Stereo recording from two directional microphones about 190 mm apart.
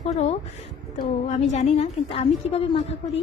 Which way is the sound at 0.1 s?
35° left (ahead or behind).